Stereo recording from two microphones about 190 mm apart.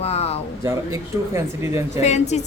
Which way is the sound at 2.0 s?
35° left (ahead or behind).